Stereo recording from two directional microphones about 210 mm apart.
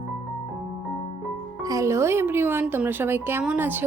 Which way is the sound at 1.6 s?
15° right (ahead or behind).